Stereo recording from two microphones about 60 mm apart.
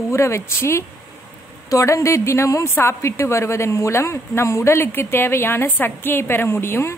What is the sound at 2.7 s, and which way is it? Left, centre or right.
A woman's voice, left.